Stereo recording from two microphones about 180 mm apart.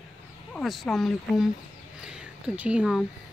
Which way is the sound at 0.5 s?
Centre (ahead or behind).